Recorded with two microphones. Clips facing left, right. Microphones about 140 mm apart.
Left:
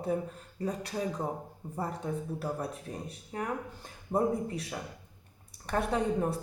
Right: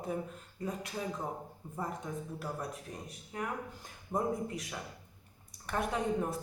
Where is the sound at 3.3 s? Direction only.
35° left (ahead or behind).